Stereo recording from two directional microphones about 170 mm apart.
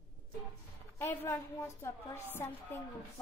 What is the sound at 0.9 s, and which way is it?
Speech, 15° left (ahead or behind).